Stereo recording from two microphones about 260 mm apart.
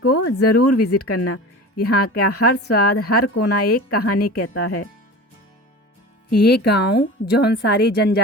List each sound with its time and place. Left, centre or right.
0.3 s a woman's voice: left
1.7 s speech: left
2.0 s a woman's voice: left
6.3 s a woman's voice: left